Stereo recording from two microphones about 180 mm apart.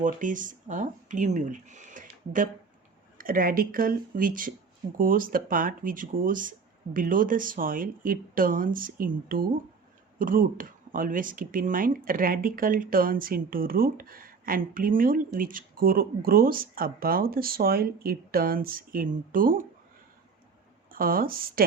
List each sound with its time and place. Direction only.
0.0 s speech: 45° right (ahead or behind)
20.9 s speech: 55° right (ahead or behind)